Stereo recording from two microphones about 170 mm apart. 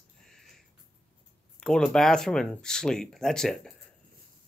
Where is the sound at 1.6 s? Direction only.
5° left (ahead or behind).